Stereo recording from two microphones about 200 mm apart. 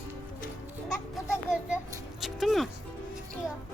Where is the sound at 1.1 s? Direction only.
5° right (ahead or behind).